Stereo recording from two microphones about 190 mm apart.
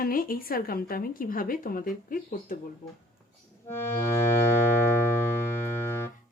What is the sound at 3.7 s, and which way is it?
Accordion, 10° left (ahead or behind).